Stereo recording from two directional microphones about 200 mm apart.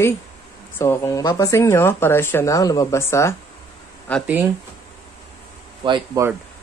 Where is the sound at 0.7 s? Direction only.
15° left (ahead or behind).